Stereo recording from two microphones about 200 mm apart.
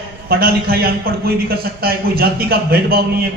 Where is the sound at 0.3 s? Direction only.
50° right (ahead or behind).